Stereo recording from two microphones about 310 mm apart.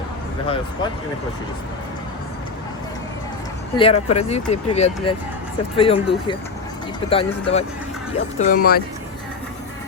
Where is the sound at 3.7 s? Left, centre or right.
Centre.